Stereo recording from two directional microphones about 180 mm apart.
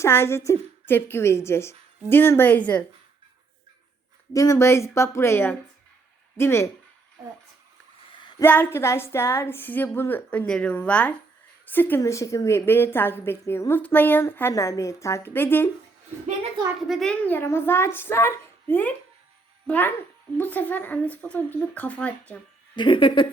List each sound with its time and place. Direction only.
0.0 s a woman's voice: 15° left (ahead or behind)
4.3 s a woman's voice: 20° left (ahead or behind)
8.2 s a sound: 25° left (ahead or behind)
8.4 s a woman's voice: 10° left (ahead or behind)
16.9 s a woman's voice: 5° left (ahead or behind)
22.7 s speech: 25° left (ahead or behind)